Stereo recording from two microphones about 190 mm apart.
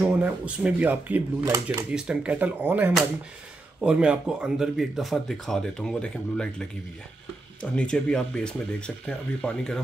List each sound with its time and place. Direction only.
0.0 s speech: 5° right (ahead or behind)
1.9 s speech: 5° right (ahead or behind)
7.7 s speech: 5° left (ahead or behind)